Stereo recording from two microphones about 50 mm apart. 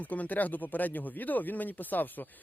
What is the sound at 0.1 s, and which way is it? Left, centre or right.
Speech, left.